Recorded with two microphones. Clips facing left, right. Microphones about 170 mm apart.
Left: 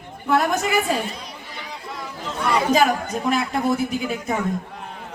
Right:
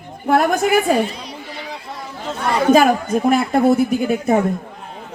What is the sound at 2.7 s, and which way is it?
Speech, 55° right (ahead or behind).